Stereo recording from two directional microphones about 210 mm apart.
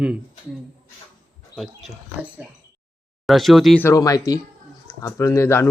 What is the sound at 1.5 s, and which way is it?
Speech, centre (ahead or behind).